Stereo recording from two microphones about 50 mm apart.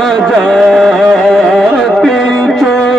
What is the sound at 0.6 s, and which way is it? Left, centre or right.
Carnatic music, centre.